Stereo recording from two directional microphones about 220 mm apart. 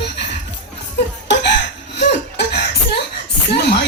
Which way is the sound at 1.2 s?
50° left (ahead or behind).